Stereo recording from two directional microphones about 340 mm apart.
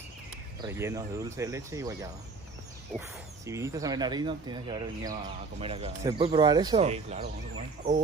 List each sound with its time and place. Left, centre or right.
0.6 s speech: centre
3.4 s speech: centre